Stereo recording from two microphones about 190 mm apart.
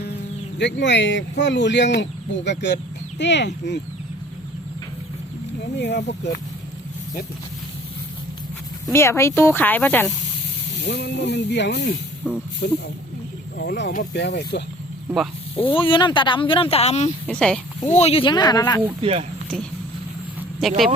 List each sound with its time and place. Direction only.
0.6 s speech: 70° left (ahead or behind)
5.8 s speech: 65° left (ahead or behind)
8.9 s speech: 15° left (ahead or behind)
10.8 s speech: 60° left (ahead or behind)
12.2 s speech: 5° right (ahead or behind)
12.6 s speech: 60° left (ahead or behind)
15.6 s speech: 25° left (ahead or behind)
17.2 s speech: 5° left (ahead or behind)
17.8 s speech: 35° left (ahead or behind); by 18.8 s 20° left (ahead or behind)
20.6 s speech: centre (ahead or behind)